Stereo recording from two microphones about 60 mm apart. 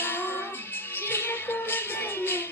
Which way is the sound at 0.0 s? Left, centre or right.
Left.